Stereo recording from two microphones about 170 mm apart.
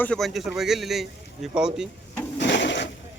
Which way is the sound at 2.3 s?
90° left.